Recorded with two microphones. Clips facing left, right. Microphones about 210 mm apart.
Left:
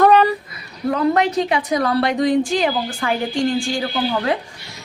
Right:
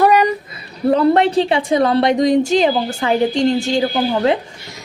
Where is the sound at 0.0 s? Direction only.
15° right (ahead or behind).